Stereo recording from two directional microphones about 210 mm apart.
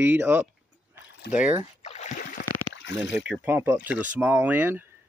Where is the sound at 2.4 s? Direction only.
60° left (ahead or behind).